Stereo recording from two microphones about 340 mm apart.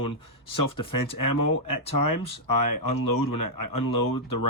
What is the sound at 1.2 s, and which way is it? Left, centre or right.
Speech, left.